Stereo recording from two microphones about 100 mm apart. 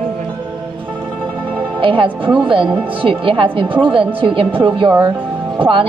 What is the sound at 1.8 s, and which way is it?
A woman's voice, 55° right (ahead or behind).